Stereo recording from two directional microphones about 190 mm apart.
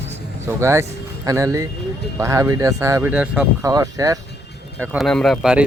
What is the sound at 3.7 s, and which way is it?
Speech, 20° right (ahead or behind).